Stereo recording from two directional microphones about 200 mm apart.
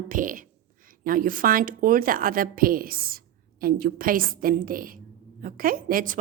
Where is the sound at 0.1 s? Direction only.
40° right (ahead or behind).